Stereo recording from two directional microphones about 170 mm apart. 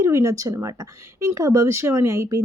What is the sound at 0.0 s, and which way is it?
Speech, 15° right (ahead or behind).